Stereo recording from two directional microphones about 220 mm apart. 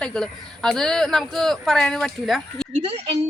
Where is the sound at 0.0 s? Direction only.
5° left (ahead or behind).